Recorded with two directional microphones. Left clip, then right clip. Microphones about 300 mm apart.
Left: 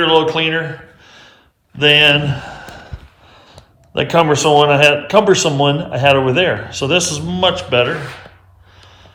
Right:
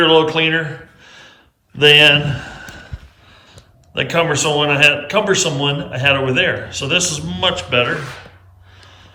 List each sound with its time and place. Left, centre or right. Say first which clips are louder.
0.0 s speech: right 1 dB; centre
2.3 s a sound: left 1 dB; centre
3.9 s speech: left 3 dB; centre
8.8 s gasp: even; centre